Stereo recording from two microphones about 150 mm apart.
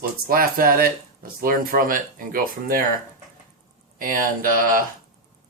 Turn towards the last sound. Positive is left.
turn(degrees=-70)  # may be behind; listen again after turning